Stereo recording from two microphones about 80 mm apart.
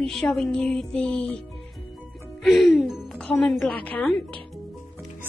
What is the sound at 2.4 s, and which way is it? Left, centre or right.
Music, centre.